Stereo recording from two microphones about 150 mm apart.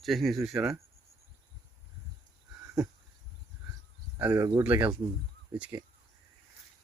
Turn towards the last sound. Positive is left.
turn(degrees=-15)  # may be behind; listen again after turning